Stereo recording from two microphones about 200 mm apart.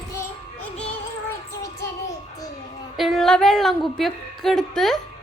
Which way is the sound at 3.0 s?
Centre (ahead or behind).